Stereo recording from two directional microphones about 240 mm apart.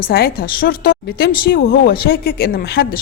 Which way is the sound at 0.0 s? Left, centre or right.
Left.